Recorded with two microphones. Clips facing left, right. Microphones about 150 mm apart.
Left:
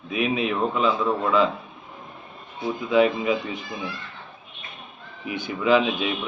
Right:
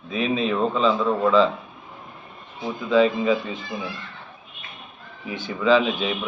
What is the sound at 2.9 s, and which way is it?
Speech, 15° left (ahead or behind).